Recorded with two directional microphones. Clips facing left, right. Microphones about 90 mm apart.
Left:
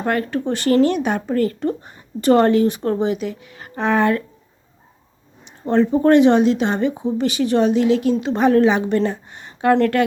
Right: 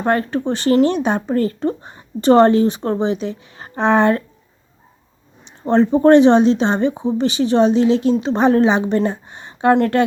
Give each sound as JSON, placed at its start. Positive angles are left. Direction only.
{"t": 0.0, "sound": "speech", "side_deg": -30}
{"t": 5.6, "sound": "speech", "side_deg": -30}